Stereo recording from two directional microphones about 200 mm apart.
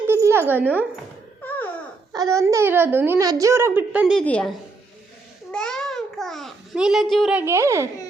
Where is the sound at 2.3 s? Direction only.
15° right (ahead or behind).